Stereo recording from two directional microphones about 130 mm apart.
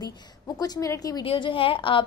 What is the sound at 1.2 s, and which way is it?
Speech, 45° left (ahead or behind).